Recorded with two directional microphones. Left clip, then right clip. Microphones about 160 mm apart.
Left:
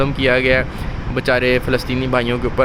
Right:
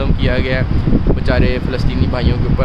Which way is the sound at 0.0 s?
30° left (ahead or behind).